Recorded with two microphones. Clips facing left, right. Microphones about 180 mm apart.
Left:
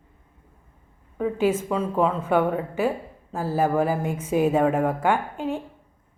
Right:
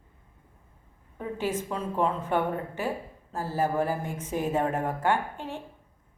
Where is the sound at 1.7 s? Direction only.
90° left.